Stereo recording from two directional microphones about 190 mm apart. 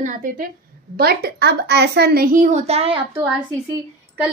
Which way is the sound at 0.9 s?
55° right (ahead or behind).